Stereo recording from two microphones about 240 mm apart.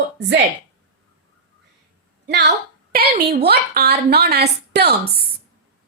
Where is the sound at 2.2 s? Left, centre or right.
Right.